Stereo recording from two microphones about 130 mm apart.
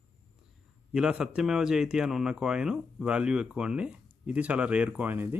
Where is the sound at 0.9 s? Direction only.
5° right (ahead or behind).